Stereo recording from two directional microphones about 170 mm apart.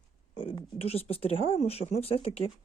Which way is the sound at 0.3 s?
30° left (ahead or behind).